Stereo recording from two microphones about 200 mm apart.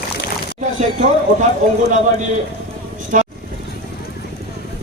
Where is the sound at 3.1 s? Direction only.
40° right (ahead or behind).